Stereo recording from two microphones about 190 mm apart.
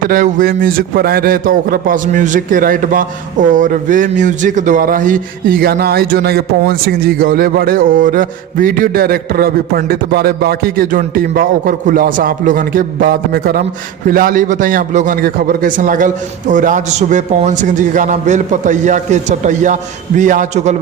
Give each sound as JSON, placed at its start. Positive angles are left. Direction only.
{"t": 0.1, "sound": "a man's voice", "side_deg": -45}